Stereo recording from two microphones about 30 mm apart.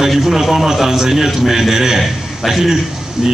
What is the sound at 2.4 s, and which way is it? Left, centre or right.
Speech, centre.